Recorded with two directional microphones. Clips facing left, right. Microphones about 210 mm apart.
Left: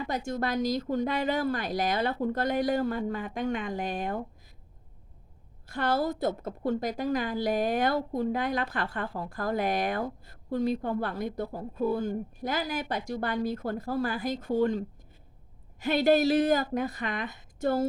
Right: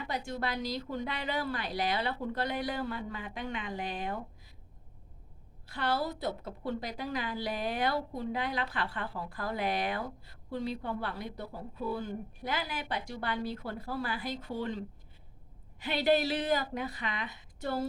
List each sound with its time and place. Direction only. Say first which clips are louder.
0.0 s a woman's voice: left 5 dB; 45° left (ahead or behind)
5.6 s a woman's voice: left 5 dB; 45° left (ahead or behind)